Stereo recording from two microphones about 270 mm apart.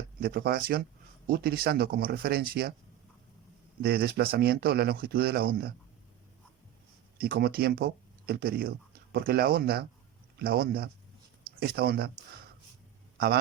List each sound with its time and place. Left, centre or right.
0.2 s speech: right
3.8 s speech: right
7.2 s speech: right
13.1 s a man's voice: right